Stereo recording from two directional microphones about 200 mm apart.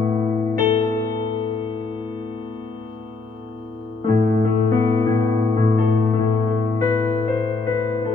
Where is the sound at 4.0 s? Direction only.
40° right (ahead or behind).